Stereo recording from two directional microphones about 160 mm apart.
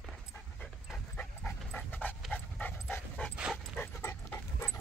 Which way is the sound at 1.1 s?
10° left (ahead or behind).